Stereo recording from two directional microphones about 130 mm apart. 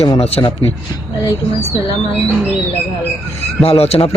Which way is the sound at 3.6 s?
50° left (ahead or behind).